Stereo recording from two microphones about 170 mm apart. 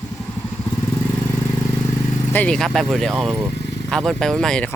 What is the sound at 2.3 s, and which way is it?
Speech, 5° left (ahead or behind).